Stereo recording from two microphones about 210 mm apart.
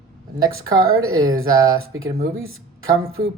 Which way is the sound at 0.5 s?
85° right.